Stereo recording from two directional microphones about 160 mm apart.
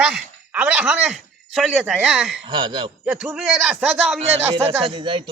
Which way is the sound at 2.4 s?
30° right (ahead or behind).